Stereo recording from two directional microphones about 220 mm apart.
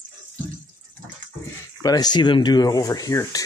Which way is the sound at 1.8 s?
15° left (ahead or behind).